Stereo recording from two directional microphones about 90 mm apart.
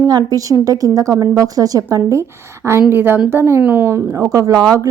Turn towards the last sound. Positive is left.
turn(degrees=-40)  # may be behind; listen again after turning